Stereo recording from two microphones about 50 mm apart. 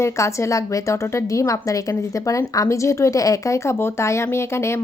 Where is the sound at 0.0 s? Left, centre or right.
Left.